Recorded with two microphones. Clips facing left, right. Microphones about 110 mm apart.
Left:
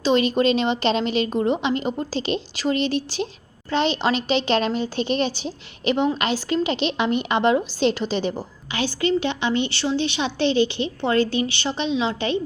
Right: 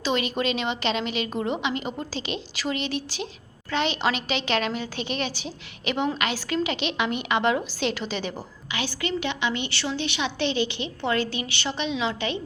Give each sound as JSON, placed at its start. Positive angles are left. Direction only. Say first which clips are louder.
{"t": 0.0, "sound": "a woman's voice", "louder": "left 7 dB", "side_deg": 30}